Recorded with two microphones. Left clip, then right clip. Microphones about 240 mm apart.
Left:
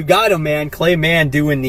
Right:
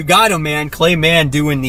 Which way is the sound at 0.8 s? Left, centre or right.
Right.